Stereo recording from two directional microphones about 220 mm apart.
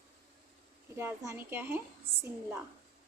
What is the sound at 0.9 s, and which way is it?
Speech, 10° right (ahead or behind).